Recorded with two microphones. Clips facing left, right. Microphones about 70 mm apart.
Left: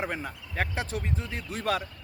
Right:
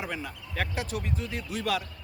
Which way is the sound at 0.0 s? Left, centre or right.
Left.